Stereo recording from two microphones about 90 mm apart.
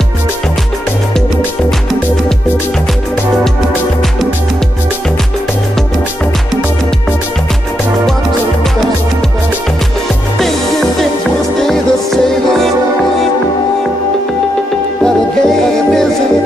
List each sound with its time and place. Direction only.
11.6 s music: 5° left (ahead or behind)
15.0 s music: 5° left (ahead or behind)